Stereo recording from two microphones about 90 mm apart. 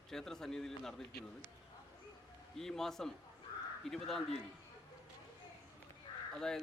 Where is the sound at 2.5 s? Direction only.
5° left (ahead or behind).